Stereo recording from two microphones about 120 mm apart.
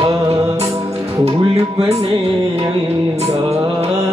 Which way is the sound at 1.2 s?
60° right (ahead or behind).